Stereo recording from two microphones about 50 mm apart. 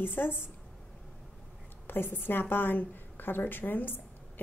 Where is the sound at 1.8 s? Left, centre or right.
Left.